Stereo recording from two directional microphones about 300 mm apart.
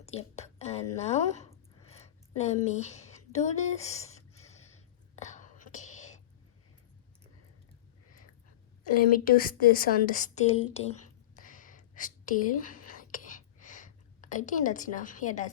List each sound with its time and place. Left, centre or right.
0.0 s a sound: left
2.6 s speech: left
5.1 s whispering: left
9.1 s a woman's voice: left
11.3 s whispering: left